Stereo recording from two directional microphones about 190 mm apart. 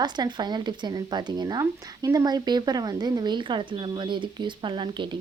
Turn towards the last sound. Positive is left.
turn(degrees=-25)  # may be behind; listen again after turning